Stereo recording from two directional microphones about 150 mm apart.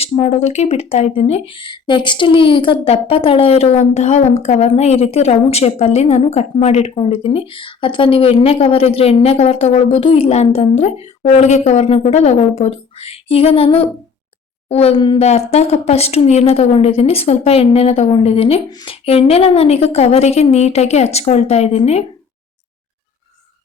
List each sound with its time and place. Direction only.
0.0 s speech: 45° left (ahead or behind)
18.7 s speech: 30° left (ahead or behind)
19.0 s speech: 45° left (ahead or behind)